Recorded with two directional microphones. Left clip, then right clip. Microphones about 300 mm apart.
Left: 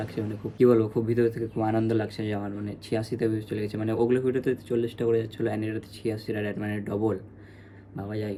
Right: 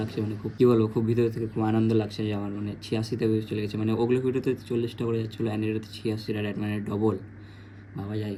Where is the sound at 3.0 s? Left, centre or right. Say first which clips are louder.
Right 1 dB; left.